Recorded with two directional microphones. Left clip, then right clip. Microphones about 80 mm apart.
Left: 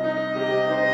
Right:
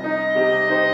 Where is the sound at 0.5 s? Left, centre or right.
Centre.